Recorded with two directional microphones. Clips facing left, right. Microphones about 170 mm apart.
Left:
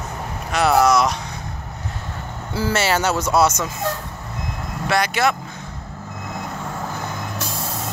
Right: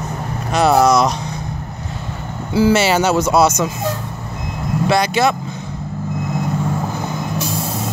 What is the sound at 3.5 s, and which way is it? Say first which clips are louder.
Speech: right 5 dB; 10° right (ahead or behind).